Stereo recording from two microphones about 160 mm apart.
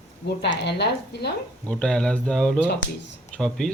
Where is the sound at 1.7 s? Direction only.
5° left (ahead or behind).